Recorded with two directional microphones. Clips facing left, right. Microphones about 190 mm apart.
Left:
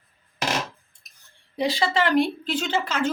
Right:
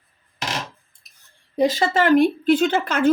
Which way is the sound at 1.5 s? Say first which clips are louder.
Right 4 dB; 45° right (ahead or behind).